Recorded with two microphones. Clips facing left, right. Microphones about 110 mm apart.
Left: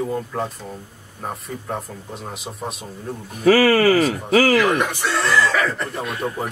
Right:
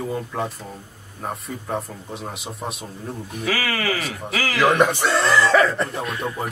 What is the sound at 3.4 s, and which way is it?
Speech, 40° left (ahead or behind).